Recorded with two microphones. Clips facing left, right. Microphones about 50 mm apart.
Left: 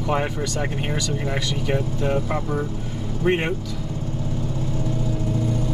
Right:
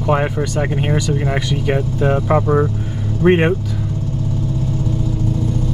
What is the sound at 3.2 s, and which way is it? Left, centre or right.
Speech, right.